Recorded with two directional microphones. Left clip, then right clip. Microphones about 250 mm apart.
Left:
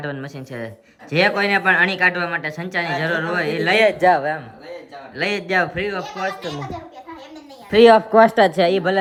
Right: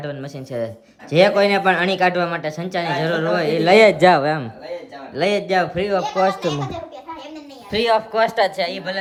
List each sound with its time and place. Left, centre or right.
0.0 s speech: centre
5.1 s speech: centre
7.7 s speech: centre